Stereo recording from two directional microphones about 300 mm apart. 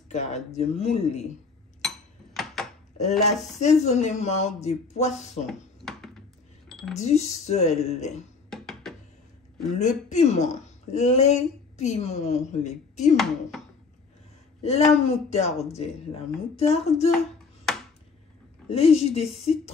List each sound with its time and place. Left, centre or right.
0.1 s speech: left
1.8 s a sound: centre
3.0 s speech: left
5.5 s a sound: centre
7.0 s speech: left
8.5 s a sound: centre
9.8 s speech: left
13.1 s speech: centre
14.6 s speech: left
18.7 s speech: centre